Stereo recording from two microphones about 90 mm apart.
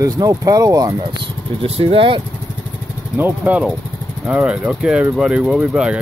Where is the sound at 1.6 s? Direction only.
90° right.